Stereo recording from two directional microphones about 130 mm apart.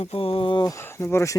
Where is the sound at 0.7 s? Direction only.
20° left (ahead or behind).